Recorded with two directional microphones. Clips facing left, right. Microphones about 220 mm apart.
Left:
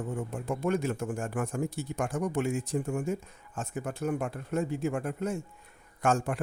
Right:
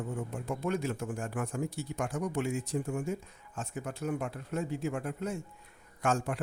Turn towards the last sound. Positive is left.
turn(degrees=50)  # may be behind; listen again after turning